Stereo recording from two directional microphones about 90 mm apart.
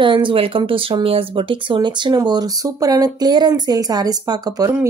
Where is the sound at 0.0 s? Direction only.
65° right (ahead or behind).